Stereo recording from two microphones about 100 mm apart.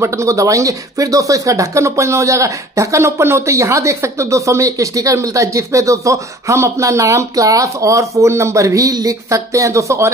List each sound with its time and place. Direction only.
0.0 s speech: 30° right (ahead or behind)